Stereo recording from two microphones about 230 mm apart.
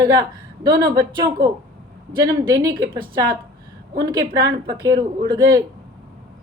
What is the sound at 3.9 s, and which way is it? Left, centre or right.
Speech, centre.